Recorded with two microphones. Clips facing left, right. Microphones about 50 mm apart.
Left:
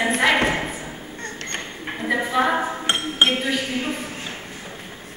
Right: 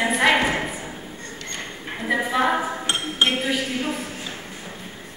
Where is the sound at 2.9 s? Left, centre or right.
Left.